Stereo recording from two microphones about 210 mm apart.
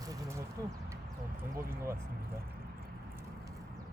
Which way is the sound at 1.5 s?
15° right (ahead or behind).